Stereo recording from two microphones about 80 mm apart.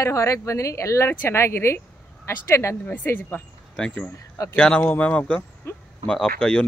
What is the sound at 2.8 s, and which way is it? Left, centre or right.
Speech, left.